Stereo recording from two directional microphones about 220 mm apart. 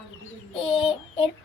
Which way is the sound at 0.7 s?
25° left (ahead or behind).